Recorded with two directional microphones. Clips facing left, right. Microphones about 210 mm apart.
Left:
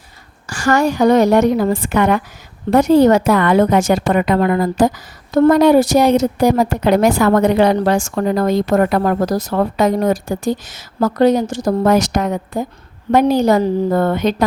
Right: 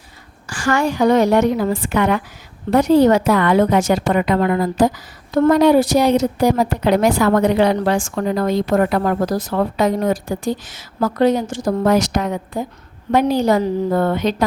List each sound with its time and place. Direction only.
0.4 s a woman's voice: 40° left (ahead or behind)